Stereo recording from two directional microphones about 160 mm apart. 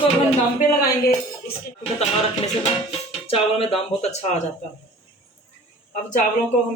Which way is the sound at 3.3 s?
35° left (ahead or behind).